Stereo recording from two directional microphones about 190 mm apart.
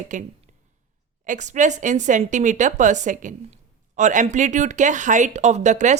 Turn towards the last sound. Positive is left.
turn(degrees=-40)  # may be behind; listen again after turning